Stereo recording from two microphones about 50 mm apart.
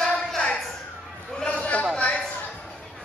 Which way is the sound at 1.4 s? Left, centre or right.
Left.